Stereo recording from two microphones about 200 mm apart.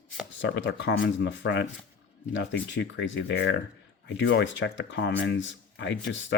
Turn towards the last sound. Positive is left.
turn(degrees=65)  # may be behind; listen again after turning